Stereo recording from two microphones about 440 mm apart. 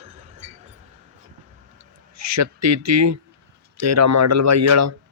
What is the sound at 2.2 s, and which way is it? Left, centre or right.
A man's voice, right.